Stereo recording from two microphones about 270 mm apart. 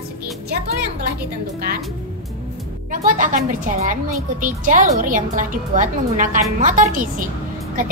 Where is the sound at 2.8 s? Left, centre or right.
Right.